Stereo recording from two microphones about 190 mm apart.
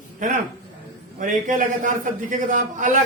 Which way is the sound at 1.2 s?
40° right (ahead or behind).